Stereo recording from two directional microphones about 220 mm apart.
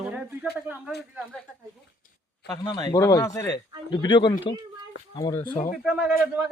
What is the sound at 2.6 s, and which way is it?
Speech, 20° left (ahead or behind).